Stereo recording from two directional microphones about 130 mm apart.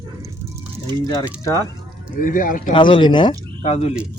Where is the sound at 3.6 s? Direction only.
55° left (ahead or behind).